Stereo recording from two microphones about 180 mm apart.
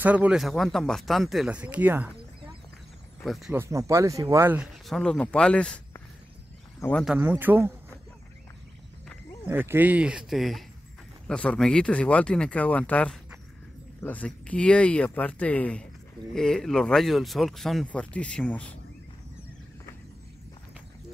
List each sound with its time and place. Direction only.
0.0 s speech: 10° right (ahead or behind)
3.3 s speech: centre (ahead or behind)
3.5 s speech: 15° right (ahead or behind)
4.6 s speech: centre (ahead or behind)
6.8 s speech: 10° left (ahead or behind)
7.1 s speech: 10° right (ahead or behind)
9.5 s speech: 10° right (ahead or behind); by 18.8 s 5° left (ahead or behind)